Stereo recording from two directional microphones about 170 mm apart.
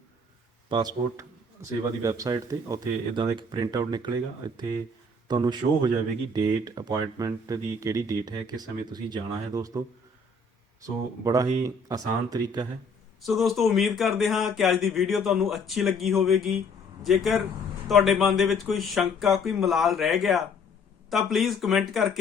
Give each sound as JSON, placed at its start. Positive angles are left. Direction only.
{"t": 0.7, "sound": "speech", "side_deg": -25}
{"t": 10.8, "sound": "speech", "side_deg": -20}
{"t": 13.2, "sound": "speech", "side_deg": 0}